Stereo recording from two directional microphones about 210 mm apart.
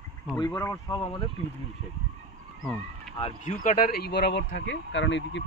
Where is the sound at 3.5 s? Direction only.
40° left (ahead or behind); by 5.4 s 60° left (ahead or behind).